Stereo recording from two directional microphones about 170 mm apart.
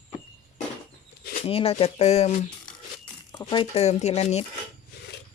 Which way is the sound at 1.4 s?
35° left (ahead or behind).